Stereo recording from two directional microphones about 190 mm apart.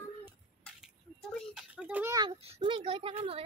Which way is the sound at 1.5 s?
5° right (ahead or behind).